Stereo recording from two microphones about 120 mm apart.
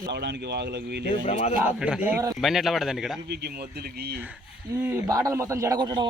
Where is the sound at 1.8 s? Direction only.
10° right (ahead or behind).